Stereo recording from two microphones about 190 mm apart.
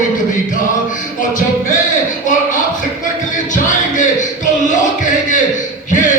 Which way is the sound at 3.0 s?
40° left (ahead or behind).